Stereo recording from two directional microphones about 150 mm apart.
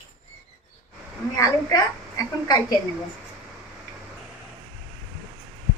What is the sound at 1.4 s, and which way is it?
A woman's voice, 25° left (ahead or behind).